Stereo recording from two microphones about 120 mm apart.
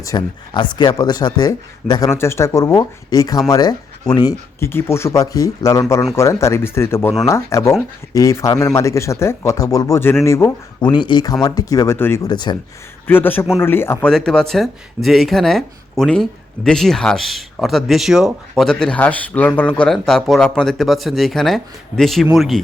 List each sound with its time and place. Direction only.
0.0 s speech: 30° left (ahead or behind)
4.6 s speech: 20° left (ahead or behind)
10.8 s speech: 40° left (ahead or behind)
11.9 s speech: 20° left (ahead or behind)
12.3 s speech: 40° left (ahead or behind)
13.1 s a man's voice: 15° left (ahead or behind)
14.1 s speech: 5° left (ahead or behind)